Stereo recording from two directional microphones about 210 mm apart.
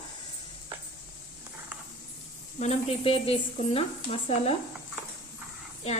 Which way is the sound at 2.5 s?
30° left (ahead or behind).